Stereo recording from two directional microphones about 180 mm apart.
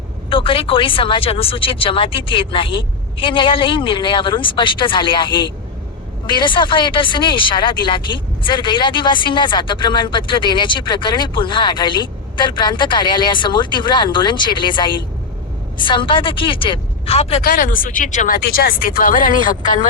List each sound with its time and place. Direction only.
0.3 s speech: 30° left (ahead or behind)
17.4 s speech: 50° left (ahead or behind)